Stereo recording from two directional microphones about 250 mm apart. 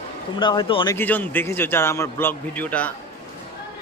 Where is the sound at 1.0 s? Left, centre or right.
Centre.